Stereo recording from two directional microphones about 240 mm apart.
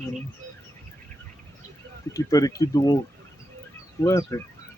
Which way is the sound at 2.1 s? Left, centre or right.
Centre.